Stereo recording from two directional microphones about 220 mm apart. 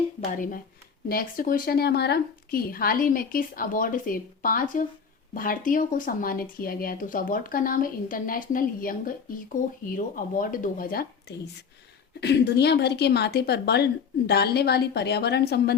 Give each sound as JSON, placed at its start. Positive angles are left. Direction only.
{"t": 0.3, "sound": "a woman's voice", "side_deg": 40}